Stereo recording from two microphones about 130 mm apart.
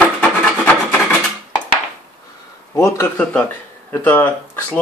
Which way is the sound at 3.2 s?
10° left (ahead or behind).